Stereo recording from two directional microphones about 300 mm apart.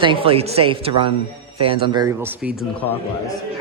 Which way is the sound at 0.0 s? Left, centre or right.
Centre.